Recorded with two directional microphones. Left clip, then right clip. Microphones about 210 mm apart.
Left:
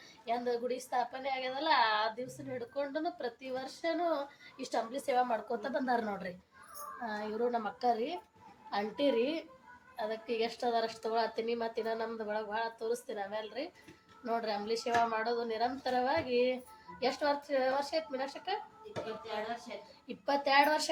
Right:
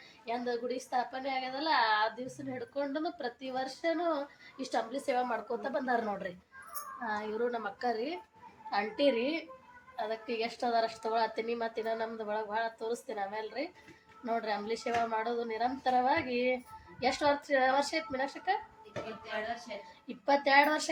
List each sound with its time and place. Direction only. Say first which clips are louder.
0.3 s a woman's voice: left 1 dB; 10° right (ahead or behind)
20.2 s a woman's voice: right 2 dB; 15° right (ahead or behind)